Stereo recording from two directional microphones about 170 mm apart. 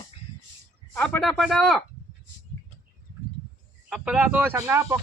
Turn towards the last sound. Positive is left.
turn(degrees=-15)  # may be behind; listen again after turning